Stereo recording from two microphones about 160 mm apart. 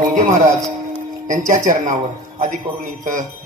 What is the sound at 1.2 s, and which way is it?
Speech, 55° right (ahead or behind).